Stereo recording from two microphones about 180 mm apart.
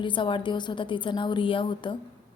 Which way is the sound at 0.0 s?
25° left (ahead or behind).